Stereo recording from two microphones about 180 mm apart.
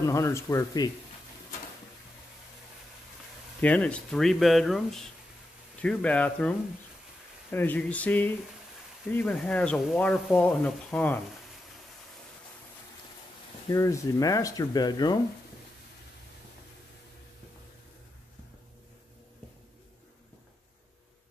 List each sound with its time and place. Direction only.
0.0 s speech: 15° left (ahead or behind)
3.6 s speech: 5° left (ahead or behind)
7.5 s speech: 10° left (ahead or behind)
13.7 s speech: 15° left (ahead or behind)